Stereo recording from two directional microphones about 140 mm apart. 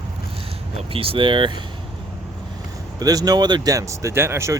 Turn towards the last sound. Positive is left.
turn(degrees=-20)  # may be behind; listen again after turning